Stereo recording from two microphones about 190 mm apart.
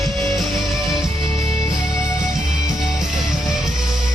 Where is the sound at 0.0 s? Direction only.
Centre (ahead or behind).